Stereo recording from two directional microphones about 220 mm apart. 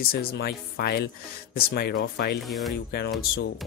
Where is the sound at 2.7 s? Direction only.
50° left (ahead or behind).